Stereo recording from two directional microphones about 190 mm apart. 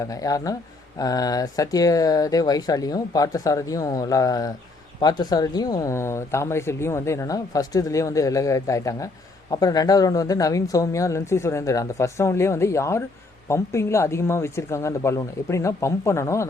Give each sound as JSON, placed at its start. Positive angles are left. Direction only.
{"t": 0.0, "sound": "speech", "side_deg": 20}